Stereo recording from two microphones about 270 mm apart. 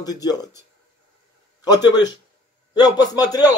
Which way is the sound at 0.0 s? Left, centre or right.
Centre.